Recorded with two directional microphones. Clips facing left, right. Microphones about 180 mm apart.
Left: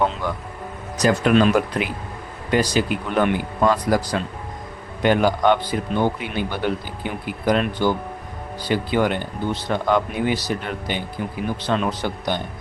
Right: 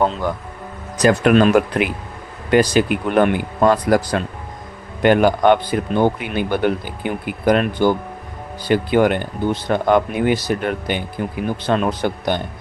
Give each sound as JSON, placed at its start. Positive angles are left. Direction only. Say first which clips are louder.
{"t": 0.0, "sound": "speech", "louder": "right 3 dB", "side_deg": -35}
{"t": 1.0, "sound": "a man's voice", "louder": "right 3 dB", "side_deg": -55}